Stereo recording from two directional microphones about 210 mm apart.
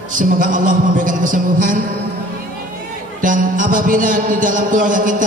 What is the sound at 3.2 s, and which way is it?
A man's voice, 40° right (ahead or behind).